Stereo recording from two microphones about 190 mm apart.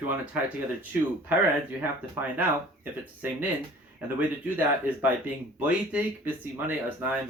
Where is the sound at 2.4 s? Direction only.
10° right (ahead or behind).